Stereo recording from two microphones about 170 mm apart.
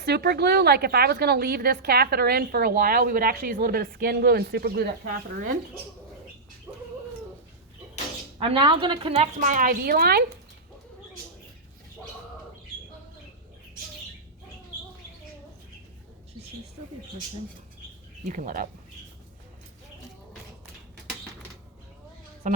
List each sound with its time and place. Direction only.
0.0 s a woman's voice: 70° right (ahead or behind)
5.4 s speech: 50° right (ahead or behind)
6.7 s a sound: 10° right (ahead or behind)
8.4 s a woman's voice: 30° right (ahead or behind)
9.4 s a woman's voice: 50° right (ahead or behind)
18.3 s speech: 50° right (ahead or behind)
22.4 s music: 50° right (ahead or behind)